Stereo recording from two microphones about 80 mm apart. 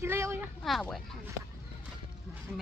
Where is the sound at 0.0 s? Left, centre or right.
Right.